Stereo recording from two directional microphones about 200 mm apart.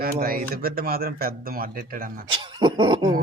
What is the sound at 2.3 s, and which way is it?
Cough, 20° right (ahead or behind).